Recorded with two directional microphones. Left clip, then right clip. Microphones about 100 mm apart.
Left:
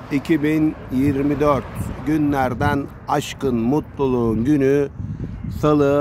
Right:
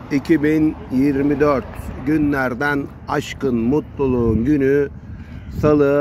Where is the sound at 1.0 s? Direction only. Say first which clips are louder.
Right 2 dB; 5° left (ahead or behind).